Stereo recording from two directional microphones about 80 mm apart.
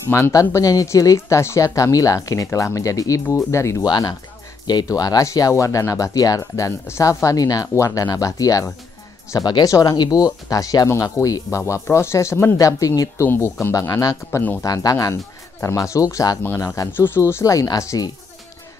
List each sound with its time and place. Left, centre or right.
0.3 s speech: left
4.6 s speech: left
10.9 s speech: left
13.2 s speech: left
13.7 s speech: left
14.6 s speech: left
16.9 s speech: left
17.3 s speech: left